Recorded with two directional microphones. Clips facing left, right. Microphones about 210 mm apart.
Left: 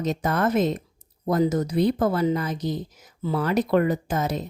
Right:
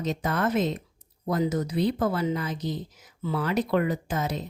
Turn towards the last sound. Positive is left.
turn(degrees=45)  # may be behind; listen again after turning